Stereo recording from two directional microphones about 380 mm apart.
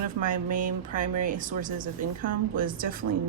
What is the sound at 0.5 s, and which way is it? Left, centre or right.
Speech, right.